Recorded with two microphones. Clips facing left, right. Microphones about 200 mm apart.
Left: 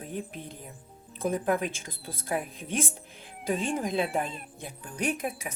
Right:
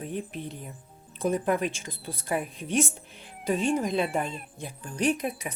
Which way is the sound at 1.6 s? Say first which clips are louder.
Right 3 dB; 50° left (ahead or behind).